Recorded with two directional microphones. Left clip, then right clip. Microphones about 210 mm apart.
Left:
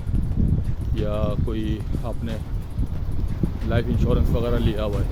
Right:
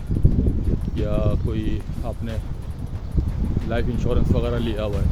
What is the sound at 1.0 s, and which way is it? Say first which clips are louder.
Speech: even; 5° left (ahead or behind).